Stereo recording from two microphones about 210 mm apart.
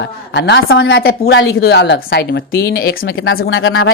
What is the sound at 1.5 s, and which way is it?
Speech, 50° left (ahead or behind).